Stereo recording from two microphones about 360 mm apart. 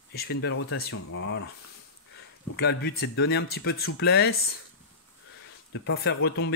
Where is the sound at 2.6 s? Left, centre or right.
Left.